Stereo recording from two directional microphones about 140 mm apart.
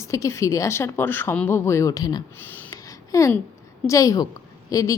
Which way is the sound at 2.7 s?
25° left (ahead or behind).